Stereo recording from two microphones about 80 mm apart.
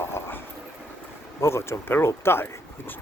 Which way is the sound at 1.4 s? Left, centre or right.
Left.